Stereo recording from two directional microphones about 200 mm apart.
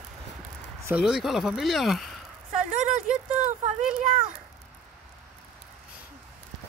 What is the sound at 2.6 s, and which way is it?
Speech, 35° right (ahead or behind).